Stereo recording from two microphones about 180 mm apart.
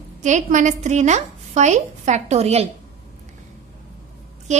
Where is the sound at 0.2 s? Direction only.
45° right (ahead or behind).